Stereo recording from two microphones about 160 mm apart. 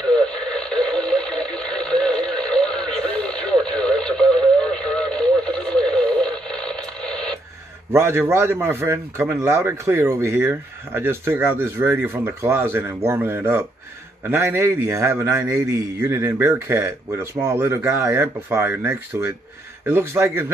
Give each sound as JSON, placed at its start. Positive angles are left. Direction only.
{"t": 0.1, "sound": "radio", "side_deg": 5}
{"t": 7.9, "sound": "a man's voice", "side_deg": -15}